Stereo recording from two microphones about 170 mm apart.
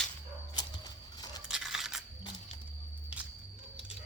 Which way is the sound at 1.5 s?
5° right (ahead or behind).